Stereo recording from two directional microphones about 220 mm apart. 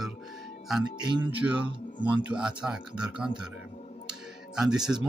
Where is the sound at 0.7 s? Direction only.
5° right (ahead or behind).